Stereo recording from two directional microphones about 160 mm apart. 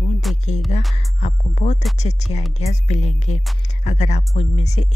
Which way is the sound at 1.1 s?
45° left (ahead or behind).